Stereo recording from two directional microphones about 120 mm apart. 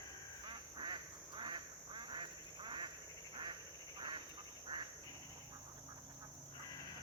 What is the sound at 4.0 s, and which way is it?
Quack, 40° right (ahead or behind).